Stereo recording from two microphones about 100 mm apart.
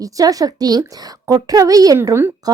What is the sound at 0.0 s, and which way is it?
Speech, 35° right (ahead or behind).